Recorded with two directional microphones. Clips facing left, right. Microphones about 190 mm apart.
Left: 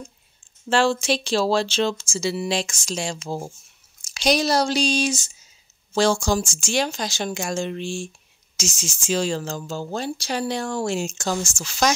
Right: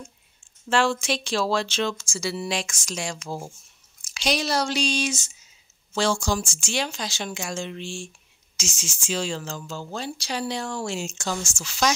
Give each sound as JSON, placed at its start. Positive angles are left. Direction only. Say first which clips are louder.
{"t": 0.7, "sound": "speech", "louder": "left 3 dB", "side_deg": 30}
{"t": 4.1, "sound": "speech", "louder": "left 5 dB", "side_deg": 40}